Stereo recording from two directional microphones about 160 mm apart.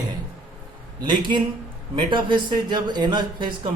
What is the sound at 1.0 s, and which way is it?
Speech, 30° right (ahead or behind).